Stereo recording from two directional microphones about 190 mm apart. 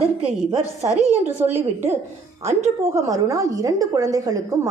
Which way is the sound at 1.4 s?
10° right (ahead or behind).